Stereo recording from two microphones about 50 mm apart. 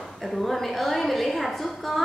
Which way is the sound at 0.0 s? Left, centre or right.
Centre.